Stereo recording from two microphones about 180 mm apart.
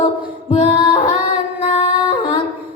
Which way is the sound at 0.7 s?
25° left (ahead or behind).